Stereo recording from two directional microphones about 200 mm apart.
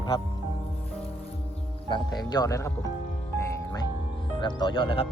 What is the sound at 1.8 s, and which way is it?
Speech, 25° left (ahead or behind).